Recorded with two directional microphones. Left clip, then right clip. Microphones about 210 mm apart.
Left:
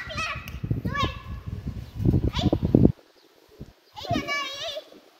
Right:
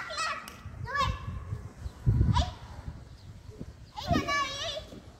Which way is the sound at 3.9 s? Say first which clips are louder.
Left 1 dB; 40° left (ahead or behind).